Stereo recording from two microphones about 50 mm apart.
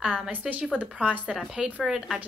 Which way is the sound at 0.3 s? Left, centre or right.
Right.